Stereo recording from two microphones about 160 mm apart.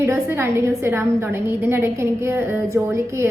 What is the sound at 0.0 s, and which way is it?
A woman's voice, 15° right (ahead or behind).